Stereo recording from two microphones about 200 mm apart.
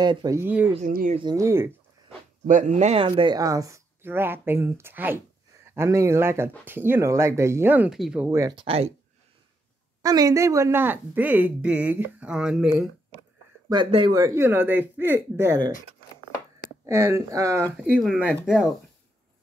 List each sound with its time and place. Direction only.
0.0 s speech: 20° right (ahead or behind)
0.7 s speech: 40° right (ahead or behind)
1.1 s speech: 20° right (ahead or behind)
2.4 s speech: 40° right (ahead or behind)
10.0 s speech: 15° right (ahead or behind)
13.7 s speech: 25° right (ahead or behind)
16.8 s speech: 15° right (ahead or behind)
17.7 s speech: 5° right (ahead or behind)